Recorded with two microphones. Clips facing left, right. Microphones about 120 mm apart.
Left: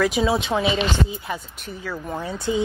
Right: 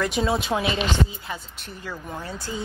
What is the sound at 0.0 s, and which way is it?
Speech, centre (ahead or behind).